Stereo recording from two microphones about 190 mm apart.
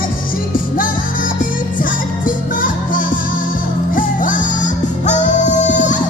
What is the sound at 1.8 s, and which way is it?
Music, 45° left (ahead or behind).